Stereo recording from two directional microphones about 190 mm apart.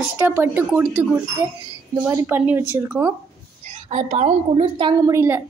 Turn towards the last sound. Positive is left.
turn(degrees=-15)  # may be behind; listen again after turning